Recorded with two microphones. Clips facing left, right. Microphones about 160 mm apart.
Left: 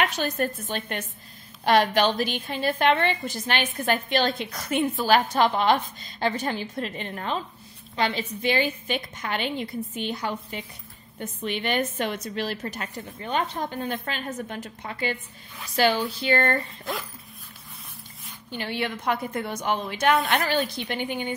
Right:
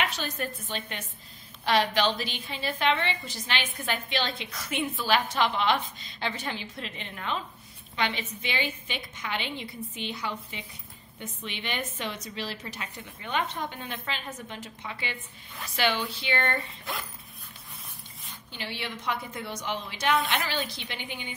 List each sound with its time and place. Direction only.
0.0 s a woman's voice: 50° left (ahead or behind)
18.5 s a woman's voice: 50° left (ahead or behind)